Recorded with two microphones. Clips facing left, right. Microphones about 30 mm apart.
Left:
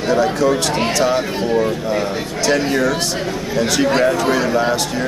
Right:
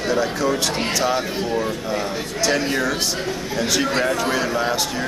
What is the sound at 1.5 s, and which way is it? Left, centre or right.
Speech, centre.